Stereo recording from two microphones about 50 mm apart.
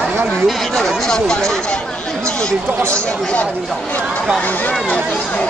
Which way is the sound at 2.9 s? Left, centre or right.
Left.